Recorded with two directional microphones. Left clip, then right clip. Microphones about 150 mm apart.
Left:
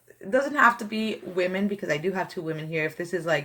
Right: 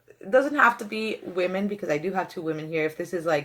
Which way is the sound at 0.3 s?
20° right (ahead or behind).